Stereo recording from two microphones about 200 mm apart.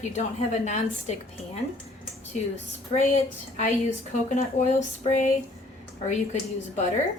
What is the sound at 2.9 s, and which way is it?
A woman's voice, 35° left (ahead or behind).